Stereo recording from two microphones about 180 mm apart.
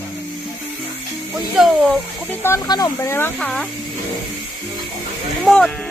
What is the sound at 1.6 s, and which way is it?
Speech, centre (ahead or behind).